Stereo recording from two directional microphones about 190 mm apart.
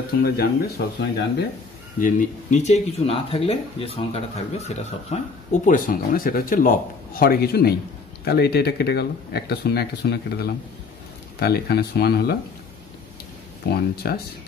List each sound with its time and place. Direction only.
0.2 s speech: 55° left (ahead or behind)
2.0 s speech: 45° left (ahead or behind)
13.7 s speech: 55° left (ahead or behind)